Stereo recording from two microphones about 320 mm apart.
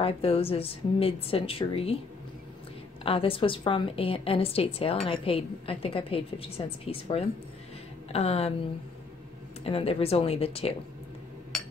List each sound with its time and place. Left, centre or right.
0.0 s a woman's voice: centre
3.0 s a woman's voice: centre
9.6 s a woman's voice: centre